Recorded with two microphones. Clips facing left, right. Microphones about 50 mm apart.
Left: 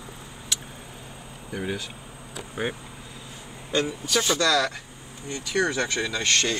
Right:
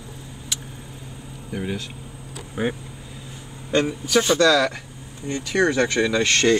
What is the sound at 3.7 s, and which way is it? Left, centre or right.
A man's voice, centre.